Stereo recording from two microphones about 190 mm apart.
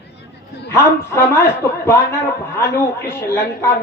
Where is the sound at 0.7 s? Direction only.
15° left (ahead or behind).